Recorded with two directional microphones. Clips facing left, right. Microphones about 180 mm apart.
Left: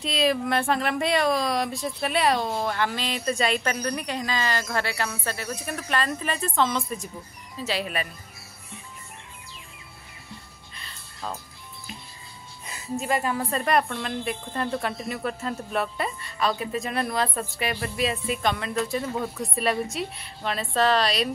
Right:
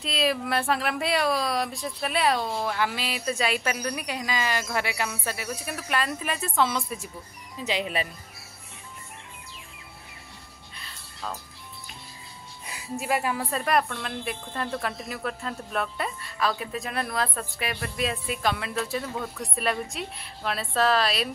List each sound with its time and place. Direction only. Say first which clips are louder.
0.0 s speech: left 3 dB; centre (ahead or behind)
10.8 s music: left 1 dB; centre (ahead or behind)
12.6 s music: left 2 dB; 10° right (ahead or behind)
13.0 s speech: left 1 dB; 10° right (ahead or behind)